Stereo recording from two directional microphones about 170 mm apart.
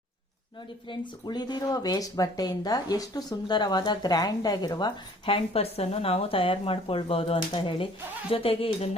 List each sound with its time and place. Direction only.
0.9 s speech: 25° left (ahead or behind)